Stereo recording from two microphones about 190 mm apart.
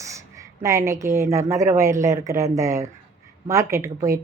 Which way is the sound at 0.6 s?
15° right (ahead or behind).